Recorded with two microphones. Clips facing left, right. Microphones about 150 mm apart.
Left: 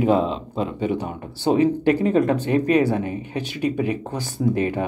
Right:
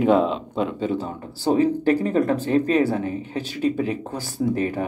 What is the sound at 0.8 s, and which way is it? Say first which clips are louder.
Speech: left 1 dB; 15° left (ahead or behind).